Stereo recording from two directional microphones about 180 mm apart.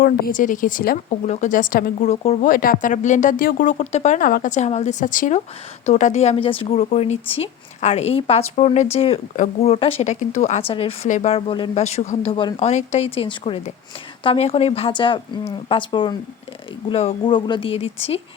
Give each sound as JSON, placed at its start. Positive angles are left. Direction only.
{"t": 0.0, "sound": "speech", "side_deg": 55}
{"t": 2.5, "sound": "a woman's voice", "side_deg": 50}